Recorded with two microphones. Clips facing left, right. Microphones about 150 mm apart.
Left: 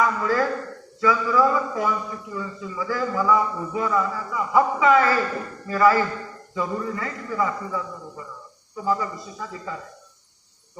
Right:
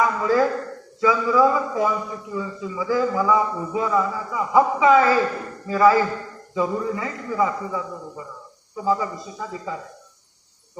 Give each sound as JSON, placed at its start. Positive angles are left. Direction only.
{"t": 0.0, "sound": "a man's voice", "side_deg": -20}